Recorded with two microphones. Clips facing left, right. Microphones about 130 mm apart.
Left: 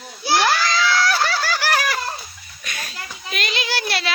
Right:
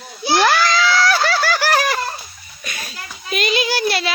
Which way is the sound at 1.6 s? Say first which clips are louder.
Right 3 dB; 35° right (ahead or behind).